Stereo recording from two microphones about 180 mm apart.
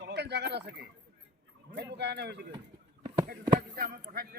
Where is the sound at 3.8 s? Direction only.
55° right (ahead or behind).